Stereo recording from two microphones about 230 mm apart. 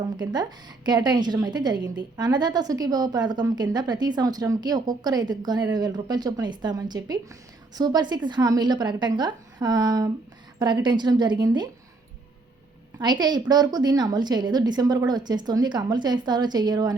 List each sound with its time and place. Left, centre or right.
0.9 s a woman's voice: centre
13.0 s a woman's voice: centre